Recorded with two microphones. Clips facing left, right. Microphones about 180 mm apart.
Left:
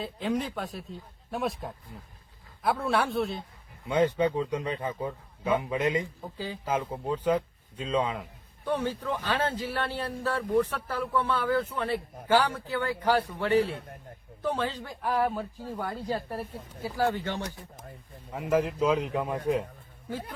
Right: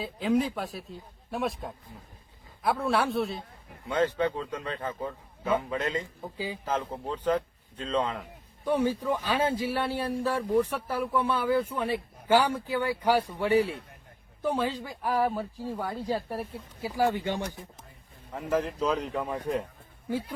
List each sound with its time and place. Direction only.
0.0 s a man's voice: centre (ahead or behind)
3.8 s a man's voice: 15° left (ahead or behind)
6.3 s a man's voice: 10° right (ahead or behind)
6.7 s a man's voice: 10° left (ahead or behind)
8.6 s a man's voice: 10° right (ahead or behind)
13.7 s a man's voice: 50° left (ahead or behind)
14.4 s a man's voice: 10° right (ahead or behind)
18.3 s a man's voice: 10° left (ahead or behind)